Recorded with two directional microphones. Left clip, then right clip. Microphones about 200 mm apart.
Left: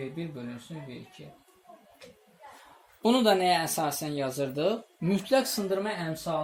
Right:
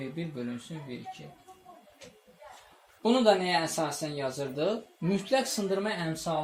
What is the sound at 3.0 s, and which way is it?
Speech, 55° left (ahead or behind).